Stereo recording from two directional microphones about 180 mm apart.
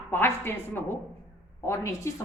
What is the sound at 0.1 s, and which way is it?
A woman's voice, 10° left (ahead or behind).